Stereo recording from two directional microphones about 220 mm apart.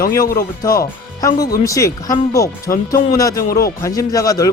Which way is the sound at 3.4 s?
40° left (ahead or behind).